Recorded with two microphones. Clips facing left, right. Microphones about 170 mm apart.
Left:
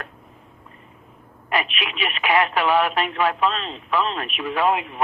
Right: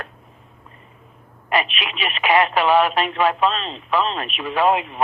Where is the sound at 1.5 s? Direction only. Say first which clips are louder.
Right 2 dB; 25° right (ahead or behind).